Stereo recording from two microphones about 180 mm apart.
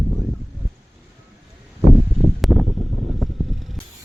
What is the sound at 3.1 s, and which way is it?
Vehicle, centre (ahead or behind).